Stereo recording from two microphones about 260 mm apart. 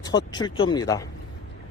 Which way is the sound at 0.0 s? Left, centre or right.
Centre.